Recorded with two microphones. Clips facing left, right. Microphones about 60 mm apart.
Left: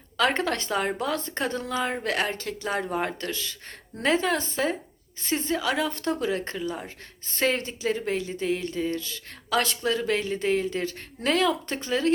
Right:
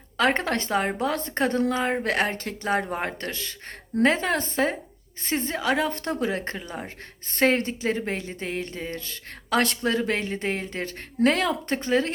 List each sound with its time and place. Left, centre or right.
0.2 s a woman's voice: right